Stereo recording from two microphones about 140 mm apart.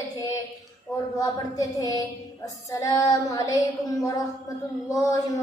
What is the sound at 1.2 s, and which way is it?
A woman's voice, 25° left (ahead or behind).